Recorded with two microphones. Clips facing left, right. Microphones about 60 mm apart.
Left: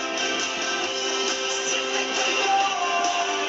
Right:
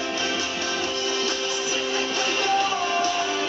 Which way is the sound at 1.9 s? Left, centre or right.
Centre.